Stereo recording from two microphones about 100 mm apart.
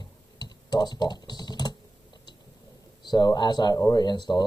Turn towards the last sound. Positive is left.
turn(degrees=45)  # may be behind; listen again after turning